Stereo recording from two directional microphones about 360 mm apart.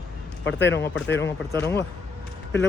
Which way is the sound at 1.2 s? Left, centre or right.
Centre.